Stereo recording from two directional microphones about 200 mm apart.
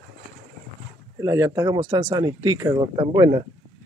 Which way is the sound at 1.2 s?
15° right (ahead or behind).